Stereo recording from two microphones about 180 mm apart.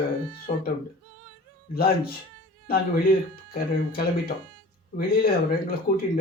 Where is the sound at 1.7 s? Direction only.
55° left (ahead or behind).